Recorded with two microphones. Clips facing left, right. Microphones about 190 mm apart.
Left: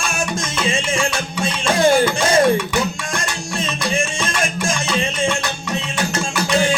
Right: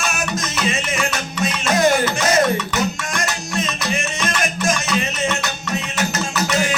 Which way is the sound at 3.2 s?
30° left (ahead or behind).